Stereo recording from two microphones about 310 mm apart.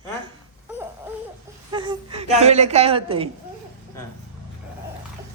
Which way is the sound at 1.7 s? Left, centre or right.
Centre.